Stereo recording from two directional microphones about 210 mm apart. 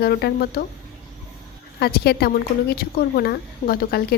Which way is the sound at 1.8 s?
50° left (ahead or behind).